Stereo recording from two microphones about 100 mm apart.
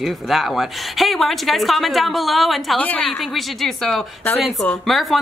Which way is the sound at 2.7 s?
15° left (ahead or behind).